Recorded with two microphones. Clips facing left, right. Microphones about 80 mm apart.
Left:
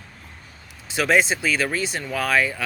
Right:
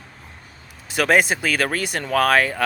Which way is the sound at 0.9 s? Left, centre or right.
Right.